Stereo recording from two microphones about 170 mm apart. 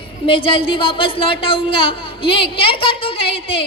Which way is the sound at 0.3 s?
30° left (ahead or behind).